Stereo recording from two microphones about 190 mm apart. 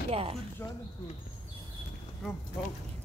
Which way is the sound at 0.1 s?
30° right (ahead or behind).